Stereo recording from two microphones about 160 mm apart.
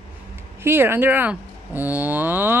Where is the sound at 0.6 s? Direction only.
15° right (ahead or behind).